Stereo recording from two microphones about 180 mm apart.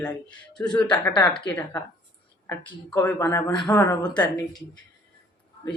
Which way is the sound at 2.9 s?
10° left (ahead or behind).